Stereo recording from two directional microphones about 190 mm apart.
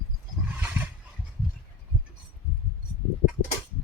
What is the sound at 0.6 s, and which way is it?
Roar, 10° right (ahead or behind).